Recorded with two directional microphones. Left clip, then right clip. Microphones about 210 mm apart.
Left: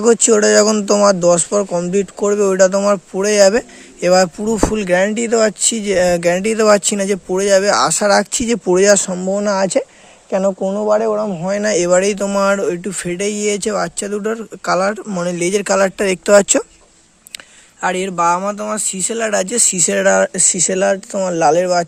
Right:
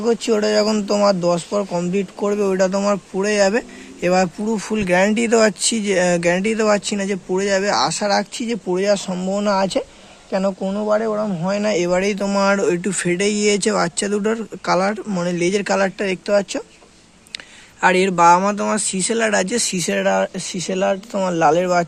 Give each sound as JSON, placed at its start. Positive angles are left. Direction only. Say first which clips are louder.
{"t": 0.0, "sound": "speech", "louder": "left 6 dB", "side_deg": 50}
{"t": 17.7, "sound": "speech", "louder": "right 3 dB", "side_deg": 20}